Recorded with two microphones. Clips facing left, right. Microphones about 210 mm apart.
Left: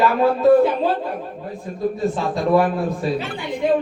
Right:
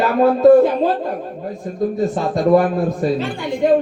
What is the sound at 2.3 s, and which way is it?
Speech, 45° right (ahead or behind).